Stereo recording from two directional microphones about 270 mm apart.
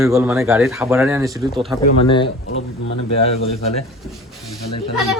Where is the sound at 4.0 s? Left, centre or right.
Centre.